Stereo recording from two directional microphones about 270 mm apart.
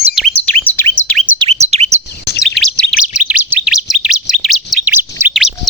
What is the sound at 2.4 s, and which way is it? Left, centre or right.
Chirp tone, centre.